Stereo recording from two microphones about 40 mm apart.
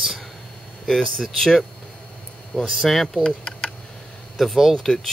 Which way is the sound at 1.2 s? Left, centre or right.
Centre.